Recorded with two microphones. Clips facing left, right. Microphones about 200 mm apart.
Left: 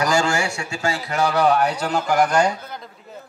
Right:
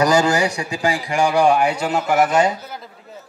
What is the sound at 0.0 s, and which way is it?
A man's voice, 20° right (ahead or behind).